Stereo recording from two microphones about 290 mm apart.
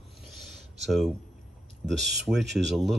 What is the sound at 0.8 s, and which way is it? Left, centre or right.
Speech, centre.